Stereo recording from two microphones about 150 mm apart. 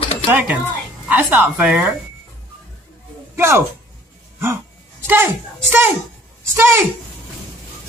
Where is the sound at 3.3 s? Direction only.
15° right (ahead or behind).